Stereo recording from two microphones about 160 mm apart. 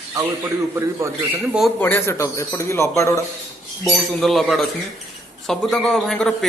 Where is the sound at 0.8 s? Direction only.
15° right (ahead or behind).